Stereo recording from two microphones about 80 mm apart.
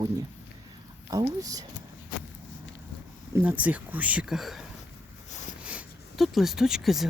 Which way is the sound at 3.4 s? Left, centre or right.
Centre.